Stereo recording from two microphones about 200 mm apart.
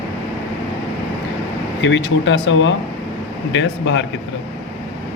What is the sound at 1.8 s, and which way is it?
Speech, 70° left (ahead or behind).